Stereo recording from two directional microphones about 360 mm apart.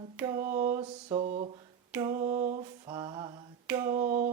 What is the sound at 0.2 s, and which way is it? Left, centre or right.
Speech, centre.